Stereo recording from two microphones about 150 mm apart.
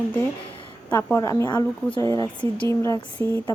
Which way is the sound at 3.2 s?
30° right (ahead or behind).